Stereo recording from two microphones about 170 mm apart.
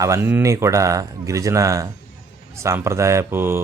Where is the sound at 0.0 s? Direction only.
15° right (ahead or behind).